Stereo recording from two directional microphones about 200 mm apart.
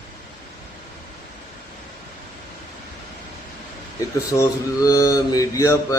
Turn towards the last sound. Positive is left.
turn(degrees=15)  # may be behind; listen again after turning